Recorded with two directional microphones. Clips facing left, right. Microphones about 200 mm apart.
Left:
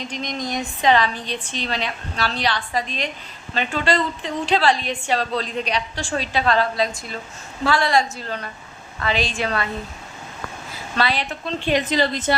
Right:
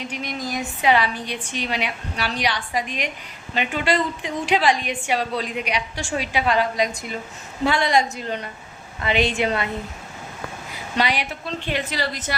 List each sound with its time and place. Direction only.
0.0 s a woman's voice: 10° right (ahead or behind)
10.7 s a woman's voice: 15° right (ahead or behind)
11.8 s a woman's voice: 20° left (ahead or behind)